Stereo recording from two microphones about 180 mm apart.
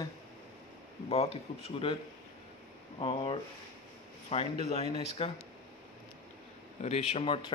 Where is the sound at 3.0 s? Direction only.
30° left (ahead or behind).